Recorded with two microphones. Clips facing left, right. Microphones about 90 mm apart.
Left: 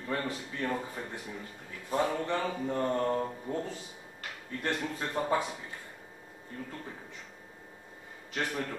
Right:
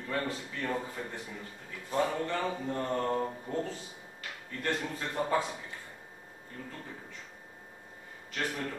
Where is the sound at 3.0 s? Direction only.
Centre (ahead or behind).